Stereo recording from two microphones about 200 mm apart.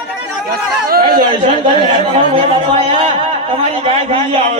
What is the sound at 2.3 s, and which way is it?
A man's voice, 25° right (ahead or behind).